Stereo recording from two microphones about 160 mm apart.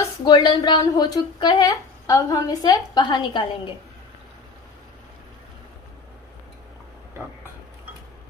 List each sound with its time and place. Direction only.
0.0 s speech: 25° left (ahead or behind)